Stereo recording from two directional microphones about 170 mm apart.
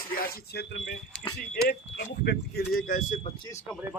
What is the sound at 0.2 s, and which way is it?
Speech, 65° left (ahead or behind).